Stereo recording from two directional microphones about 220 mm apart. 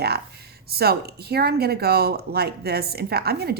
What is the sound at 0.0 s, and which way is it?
Speech, 45° right (ahead or behind).